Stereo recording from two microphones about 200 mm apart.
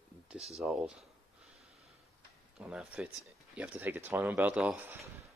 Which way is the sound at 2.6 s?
5° right (ahead or behind).